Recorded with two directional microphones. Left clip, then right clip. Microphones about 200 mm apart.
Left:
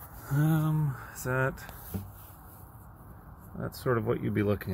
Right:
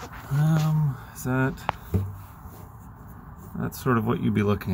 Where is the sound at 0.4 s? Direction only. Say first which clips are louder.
Right 2 dB; 20° left (ahead or behind).